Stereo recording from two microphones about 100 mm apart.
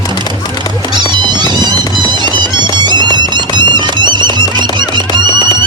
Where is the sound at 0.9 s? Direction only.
45° right (ahead or behind).